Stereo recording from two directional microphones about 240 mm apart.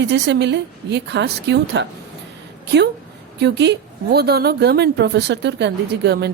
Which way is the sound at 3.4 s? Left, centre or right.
Right.